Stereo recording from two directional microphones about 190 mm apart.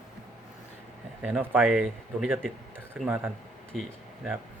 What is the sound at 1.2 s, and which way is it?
Speech, 10° right (ahead or behind).